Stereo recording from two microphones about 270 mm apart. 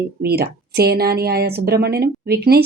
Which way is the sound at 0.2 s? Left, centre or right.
Right.